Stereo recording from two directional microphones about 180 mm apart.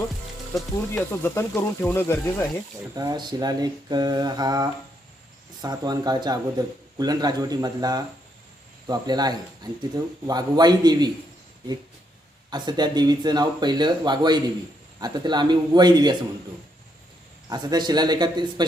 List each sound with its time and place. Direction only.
0.5 s speech: 10° left (ahead or behind)
2.9 s a man's voice: 20° right (ahead or behind)
12.5 s a man's voice: 25° right (ahead or behind)
17.5 s a man's voice: 20° right (ahead or behind)